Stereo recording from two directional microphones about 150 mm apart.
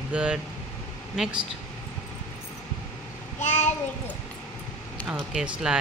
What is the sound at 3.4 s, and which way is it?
Child singing, 50° left (ahead or behind).